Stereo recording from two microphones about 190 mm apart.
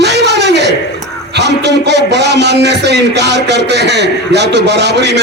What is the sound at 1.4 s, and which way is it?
Speech, 65° right (ahead or behind).